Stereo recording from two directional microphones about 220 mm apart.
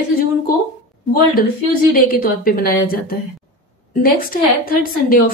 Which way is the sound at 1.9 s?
40° left (ahead or behind).